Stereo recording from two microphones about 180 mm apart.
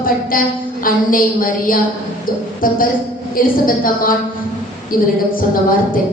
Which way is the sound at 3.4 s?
50° left (ahead or behind).